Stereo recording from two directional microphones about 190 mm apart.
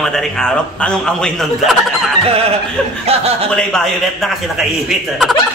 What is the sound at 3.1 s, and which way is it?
Speech, 30° right (ahead or behind).